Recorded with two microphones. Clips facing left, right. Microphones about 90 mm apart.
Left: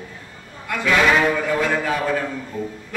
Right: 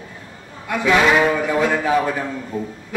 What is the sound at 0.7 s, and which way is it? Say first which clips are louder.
Speech: right 3 dB; 20° right (ahead or behind).